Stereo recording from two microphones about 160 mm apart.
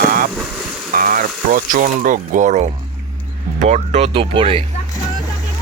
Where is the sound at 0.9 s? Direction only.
60° right (ahead or behind); by 4.7 s 35° right (ahead or behind).